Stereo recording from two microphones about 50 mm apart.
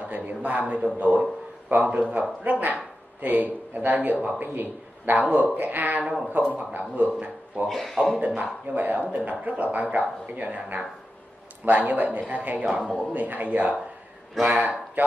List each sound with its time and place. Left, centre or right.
0.0 s a sound: right
0.9 s a man's voice: right
7.6 s speech: centre
8.7 s speech: right
12.8 s speech: centre
13.1 s a man's voice: right